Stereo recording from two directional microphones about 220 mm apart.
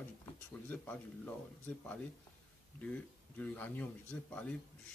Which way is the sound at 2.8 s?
5° left (ahead or behind).